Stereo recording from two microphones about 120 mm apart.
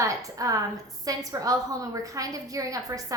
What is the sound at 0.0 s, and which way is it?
A woman's voice, 25° right (ahead or behind).